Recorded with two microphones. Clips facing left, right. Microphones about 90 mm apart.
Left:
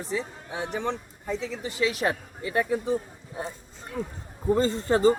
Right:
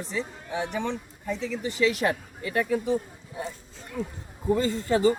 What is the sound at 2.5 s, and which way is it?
Speech, 25° left (ahead or behind).